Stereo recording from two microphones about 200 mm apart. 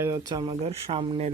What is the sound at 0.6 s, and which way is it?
Speech, 30° right (ahead or behind).